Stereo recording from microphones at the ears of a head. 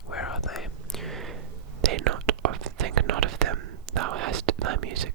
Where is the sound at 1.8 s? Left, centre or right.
Right.